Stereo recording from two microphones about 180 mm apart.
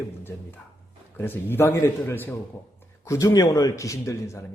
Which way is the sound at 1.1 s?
10° left (ahead or behind).